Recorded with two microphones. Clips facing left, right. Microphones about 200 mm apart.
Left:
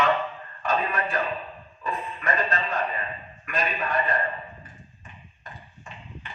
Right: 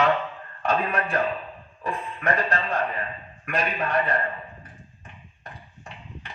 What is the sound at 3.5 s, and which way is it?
Speech, 65° right (ahead or behind).